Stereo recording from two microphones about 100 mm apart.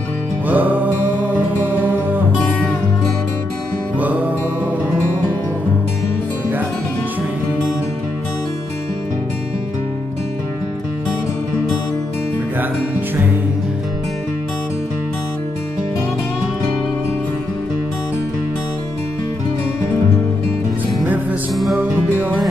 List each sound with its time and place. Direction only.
0.5 s music: 15° right (ahead or behind)
21.7 s music: 15° right (ahead or behind)